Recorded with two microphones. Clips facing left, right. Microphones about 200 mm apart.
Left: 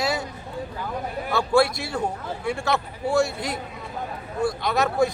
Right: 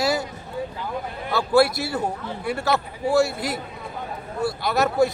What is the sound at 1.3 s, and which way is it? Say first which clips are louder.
A man's voice: right 2 dB; 5° right (ahead or behind).